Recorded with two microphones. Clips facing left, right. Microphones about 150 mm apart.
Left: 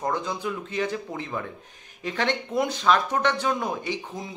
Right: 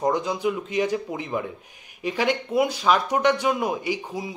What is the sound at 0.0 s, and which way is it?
Speech, 15° right (ahead or behind).